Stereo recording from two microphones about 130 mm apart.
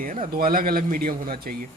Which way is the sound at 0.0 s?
85° right.